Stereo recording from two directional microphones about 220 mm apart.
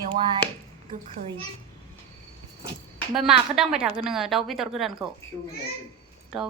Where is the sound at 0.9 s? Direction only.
25° right (ahead or behind).